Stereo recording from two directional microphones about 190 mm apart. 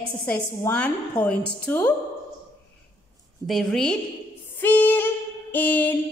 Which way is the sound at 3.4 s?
Centre (ahead or behind).